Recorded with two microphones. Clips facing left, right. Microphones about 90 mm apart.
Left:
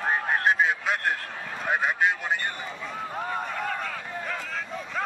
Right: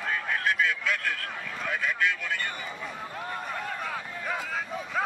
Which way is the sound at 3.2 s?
30° left (ahead or behind).